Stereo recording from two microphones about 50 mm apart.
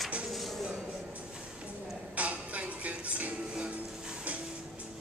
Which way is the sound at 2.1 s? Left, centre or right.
Right.